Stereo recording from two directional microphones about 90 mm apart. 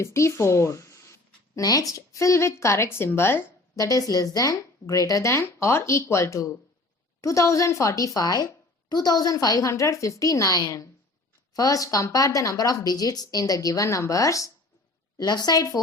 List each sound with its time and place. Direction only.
0.0 s speech: 35° left (ahead or behind)
15.2 s a woman's voice: 50° left (ahead or behind)